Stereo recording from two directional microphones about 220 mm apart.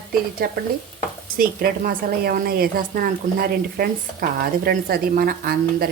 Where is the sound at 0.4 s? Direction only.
40° right (ahead or behind).